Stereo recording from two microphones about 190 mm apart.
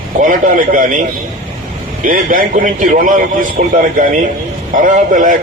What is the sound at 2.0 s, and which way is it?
A man's voice, 45° right (ahead or behind).